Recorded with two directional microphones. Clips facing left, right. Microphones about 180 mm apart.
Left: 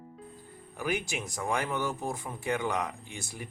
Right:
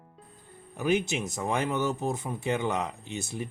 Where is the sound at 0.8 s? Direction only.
25° right (ahead or behind).